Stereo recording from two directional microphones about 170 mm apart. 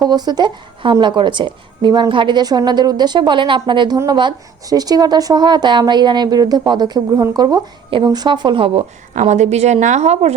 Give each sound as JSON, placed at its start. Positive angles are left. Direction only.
{"t": 0.0, "sound": "a woman's voice", "side_deg": -25}
{"t": 9.1, "sound": "a woman's voice", "side_deg": -45}